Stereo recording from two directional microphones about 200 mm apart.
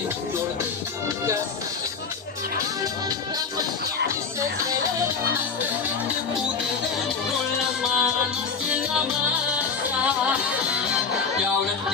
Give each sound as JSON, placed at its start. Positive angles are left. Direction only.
{"t": 2.8, "sound": "music", "side_deg": -20}
{"t": 7.8, "sound": "music", "side_deg": 0}
{"t": 10.0, "sound": "music", "side_deg": -5}